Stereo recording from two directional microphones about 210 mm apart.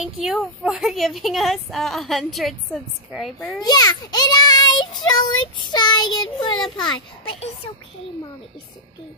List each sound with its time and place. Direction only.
0.0 s a woman's voice: centre (ahead or behind)
3.5 s a child's voice: 20° left (ahead or behind)